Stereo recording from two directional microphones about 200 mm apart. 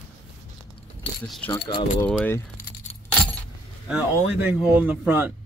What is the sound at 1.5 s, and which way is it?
Speech, 25° left (ahead or behind).